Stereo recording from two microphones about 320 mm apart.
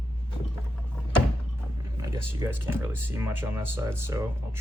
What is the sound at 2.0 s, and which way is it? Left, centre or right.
Speech, centre.